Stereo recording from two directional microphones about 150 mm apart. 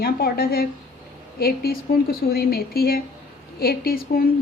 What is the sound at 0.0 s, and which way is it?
A woman's voice, 90° left.